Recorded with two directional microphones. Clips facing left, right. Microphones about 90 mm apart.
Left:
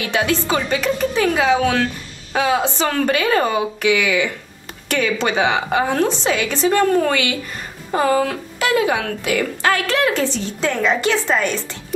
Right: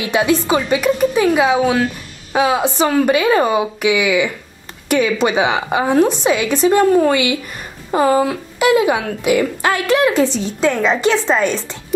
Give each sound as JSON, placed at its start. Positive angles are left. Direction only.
{"t": 0.0, "sound": "a woman's voice", "side_deg": -20}